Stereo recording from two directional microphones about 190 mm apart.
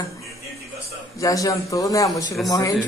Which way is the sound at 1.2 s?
20° left (ahead or behind).